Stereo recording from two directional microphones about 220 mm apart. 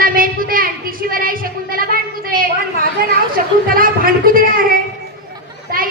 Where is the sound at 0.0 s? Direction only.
40° right (ahead or behind).